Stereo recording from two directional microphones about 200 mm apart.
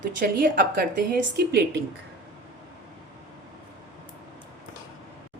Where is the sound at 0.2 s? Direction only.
50° right (ahead or behind).